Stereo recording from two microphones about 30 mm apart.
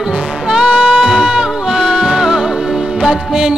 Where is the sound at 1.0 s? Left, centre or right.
Centre.